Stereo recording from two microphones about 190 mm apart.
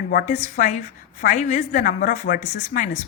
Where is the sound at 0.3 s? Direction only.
40° left (ahead or behind).